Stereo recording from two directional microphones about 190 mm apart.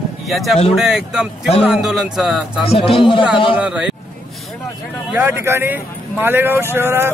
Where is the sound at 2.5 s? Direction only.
30° left (ahead or behind).